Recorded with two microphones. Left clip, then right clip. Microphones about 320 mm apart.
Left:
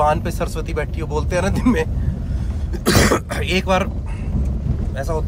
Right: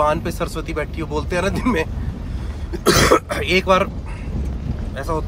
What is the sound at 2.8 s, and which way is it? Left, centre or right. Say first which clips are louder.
Speech: right 3 dB; centre.